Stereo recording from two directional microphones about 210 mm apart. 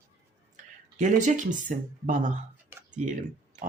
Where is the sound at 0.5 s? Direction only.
35° right (ahead or behind).